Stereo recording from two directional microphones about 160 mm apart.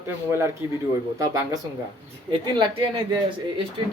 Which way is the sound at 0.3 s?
15° right (ahead or behind).